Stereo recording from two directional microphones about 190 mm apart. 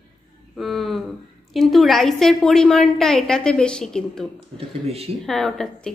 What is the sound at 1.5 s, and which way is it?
A woman's voice, centre (ahead or behind).